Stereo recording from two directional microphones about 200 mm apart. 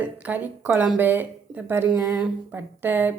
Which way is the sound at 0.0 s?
10° right (ahead or behind).